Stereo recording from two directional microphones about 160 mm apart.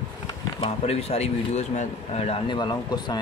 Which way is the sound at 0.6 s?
40° left (ahead or behind).